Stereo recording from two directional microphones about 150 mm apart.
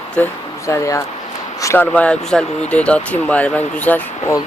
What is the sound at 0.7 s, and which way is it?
Speech, 20° left (ahead or behind).